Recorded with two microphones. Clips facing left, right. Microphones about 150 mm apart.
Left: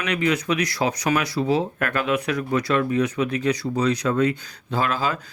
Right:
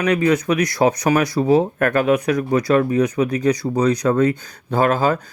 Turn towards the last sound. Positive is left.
turn(degrees=-50)  # may be behind; listen again after turning